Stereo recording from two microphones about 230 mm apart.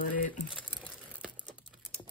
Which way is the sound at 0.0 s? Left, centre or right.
Left.